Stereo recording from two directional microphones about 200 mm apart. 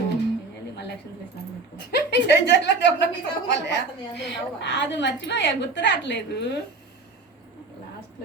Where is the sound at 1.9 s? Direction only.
55° left (ahead or behind).